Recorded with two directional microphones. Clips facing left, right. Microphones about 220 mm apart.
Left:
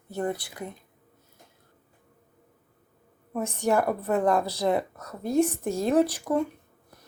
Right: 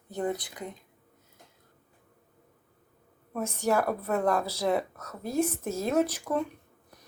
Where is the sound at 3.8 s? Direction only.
5° left (ahead or behind).